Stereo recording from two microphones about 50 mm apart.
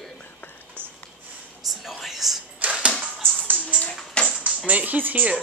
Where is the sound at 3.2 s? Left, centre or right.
Right.